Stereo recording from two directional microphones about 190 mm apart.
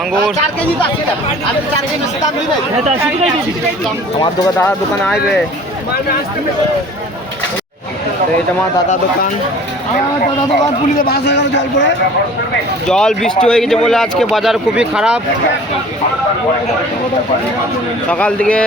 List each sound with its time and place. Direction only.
4.2 s speech: 15° left (ahead or behind)
10.9 s a man's voice: 55° left (ahead or behind)
12.9 s a man's voice: 5° left (ahead or behind)
18.1 s speech: 5° left (ahead or behind)